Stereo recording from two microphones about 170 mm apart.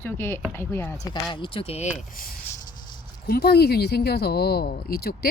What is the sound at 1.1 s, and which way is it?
Speech, 30° left (ahead or behind).